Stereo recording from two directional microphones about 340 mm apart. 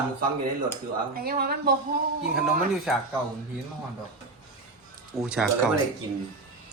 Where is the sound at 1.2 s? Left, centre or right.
Right.